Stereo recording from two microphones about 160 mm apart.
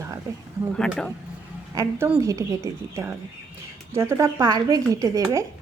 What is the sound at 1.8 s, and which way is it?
Speech, 20° right (ahead or behind).